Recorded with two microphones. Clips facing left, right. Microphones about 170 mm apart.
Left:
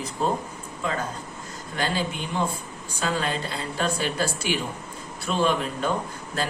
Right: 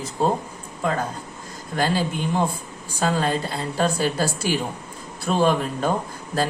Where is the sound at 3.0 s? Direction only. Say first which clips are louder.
Right 5 dB; 40° right (ahead or behind).